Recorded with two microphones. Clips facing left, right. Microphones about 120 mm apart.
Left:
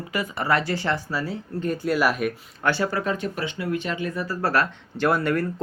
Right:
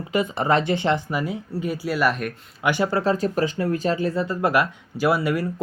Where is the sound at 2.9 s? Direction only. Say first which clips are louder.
Right 5 dB; 30° right (ahead or behind).